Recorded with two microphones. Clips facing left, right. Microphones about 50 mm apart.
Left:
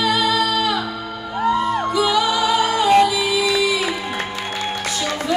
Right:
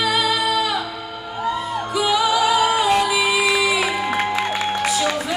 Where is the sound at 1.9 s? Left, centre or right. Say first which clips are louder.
Right 3 dB; centre.